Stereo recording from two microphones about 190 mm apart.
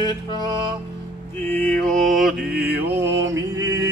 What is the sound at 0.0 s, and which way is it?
Music, 25° left (ahead or behind).